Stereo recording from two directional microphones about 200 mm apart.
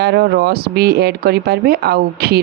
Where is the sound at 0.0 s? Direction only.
55° right (ahead or behind).